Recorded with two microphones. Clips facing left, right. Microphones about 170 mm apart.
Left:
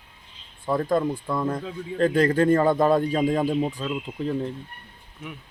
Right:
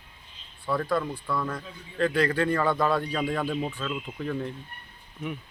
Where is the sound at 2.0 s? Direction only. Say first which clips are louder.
Left 5 dB; 45° left (ahead or behind).